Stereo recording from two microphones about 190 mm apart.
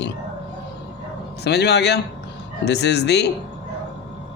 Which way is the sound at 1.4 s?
60° left (ahead or behind).